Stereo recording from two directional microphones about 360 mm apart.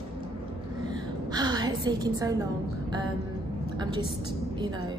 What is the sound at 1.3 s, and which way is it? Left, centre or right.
A woman's voice, centre.